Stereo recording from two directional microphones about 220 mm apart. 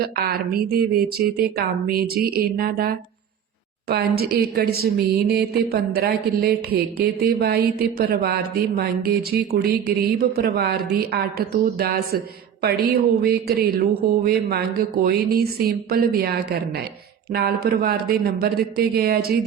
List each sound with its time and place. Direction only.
0.0 s a woman's voice: 45° right (ahead or behind)
15.0 s a woman's voice: 45° right (ahead or behind)